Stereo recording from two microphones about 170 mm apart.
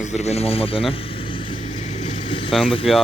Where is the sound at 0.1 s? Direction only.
40° left (ahead or behind).